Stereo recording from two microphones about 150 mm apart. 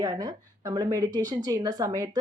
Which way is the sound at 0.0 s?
25° right (ahead or behind).